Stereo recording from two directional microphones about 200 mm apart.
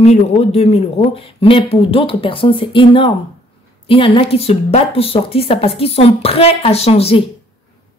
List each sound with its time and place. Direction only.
0.0 s a woman's voice: 30° left (ahead or behind)